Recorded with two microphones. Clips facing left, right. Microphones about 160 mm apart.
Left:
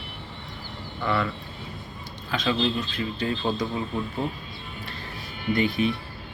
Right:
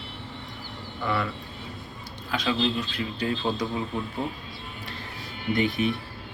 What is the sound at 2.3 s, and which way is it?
Speech, 10° right (ahead or behind).